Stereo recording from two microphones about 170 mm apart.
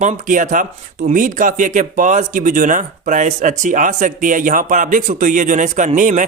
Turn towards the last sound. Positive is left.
turn(degrees=-50)  # may be behind; listen again after turning